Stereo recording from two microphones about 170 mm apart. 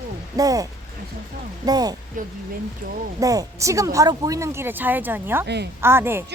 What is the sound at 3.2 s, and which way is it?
Speech, 20° right (ahead or behind).